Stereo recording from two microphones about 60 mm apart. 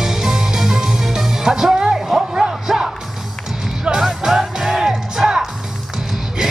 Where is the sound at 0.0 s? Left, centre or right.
Centre.